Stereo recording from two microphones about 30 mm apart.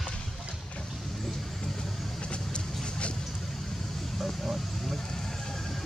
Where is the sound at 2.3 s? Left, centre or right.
Left.